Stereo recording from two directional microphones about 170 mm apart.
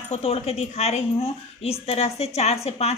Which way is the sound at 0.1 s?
35° left (ahead or behind).